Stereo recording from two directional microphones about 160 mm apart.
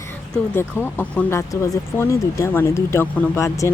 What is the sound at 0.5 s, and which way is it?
Speech, 15° left (ahead or behind).